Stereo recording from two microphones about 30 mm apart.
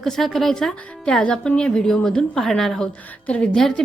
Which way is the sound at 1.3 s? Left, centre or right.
Left.